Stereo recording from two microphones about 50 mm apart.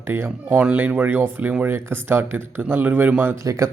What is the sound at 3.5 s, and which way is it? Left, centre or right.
Speech, right.